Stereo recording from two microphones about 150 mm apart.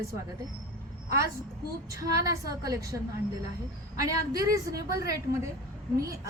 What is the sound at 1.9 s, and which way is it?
A woman's voice, 20° right (ahead or behind).